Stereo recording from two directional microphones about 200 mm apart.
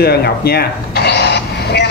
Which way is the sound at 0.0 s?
50° left (ahead or behind).